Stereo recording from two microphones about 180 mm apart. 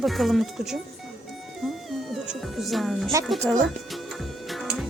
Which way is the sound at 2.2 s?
5° right (ahead or behind).